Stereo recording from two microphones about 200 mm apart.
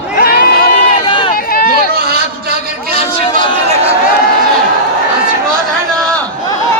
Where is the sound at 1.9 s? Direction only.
50° right (ahead or behind).